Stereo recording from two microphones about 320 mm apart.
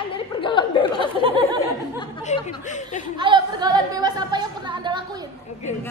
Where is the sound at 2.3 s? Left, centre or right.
Left.